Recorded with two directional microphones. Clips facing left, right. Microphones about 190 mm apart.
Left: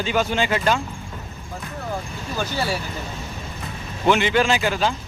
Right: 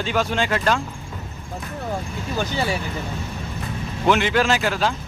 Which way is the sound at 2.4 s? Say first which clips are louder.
Right 1 dB; 15° right (ahead or behind).